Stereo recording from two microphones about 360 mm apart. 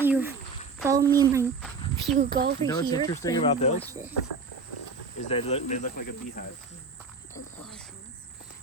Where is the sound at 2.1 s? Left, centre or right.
Right.